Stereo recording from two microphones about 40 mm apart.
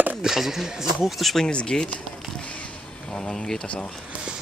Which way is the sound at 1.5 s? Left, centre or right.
Left.